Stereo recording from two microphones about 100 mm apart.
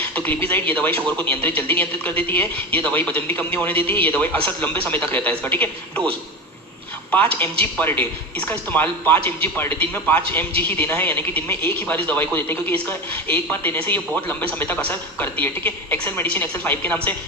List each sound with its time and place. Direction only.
0.1 s speech: 15° left (ahead or behind)
7.6 s a man's voice: 20° left (ahead or behind)